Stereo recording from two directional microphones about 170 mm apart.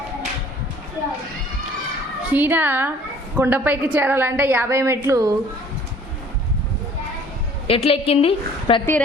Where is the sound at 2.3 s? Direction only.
10° right (ahead or behind).